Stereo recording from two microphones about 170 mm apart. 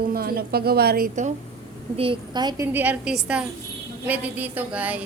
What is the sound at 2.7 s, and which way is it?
A woman's voice, 10° right (ahead or behind).